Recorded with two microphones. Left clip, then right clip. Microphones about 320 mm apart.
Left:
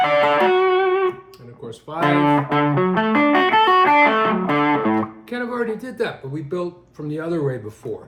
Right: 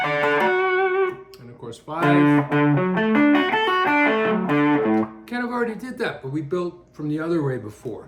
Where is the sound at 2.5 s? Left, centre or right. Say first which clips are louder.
Left 2 dB; left.